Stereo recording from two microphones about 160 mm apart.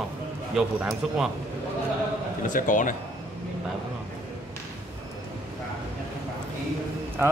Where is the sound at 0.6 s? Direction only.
5° right (ahead or behind).